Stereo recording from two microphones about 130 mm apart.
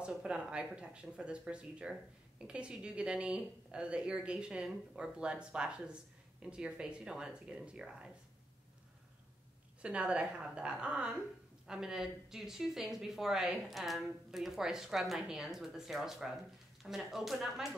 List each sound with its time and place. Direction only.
0.0 s speech: 5° right (ahead or behind)
9.8 s a woman's voice: 10° right (ahead or behind)